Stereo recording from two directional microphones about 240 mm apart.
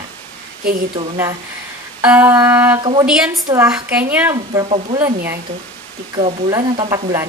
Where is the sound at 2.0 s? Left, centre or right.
Centre.